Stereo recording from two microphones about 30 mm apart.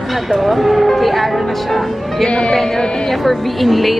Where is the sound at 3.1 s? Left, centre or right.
Centre.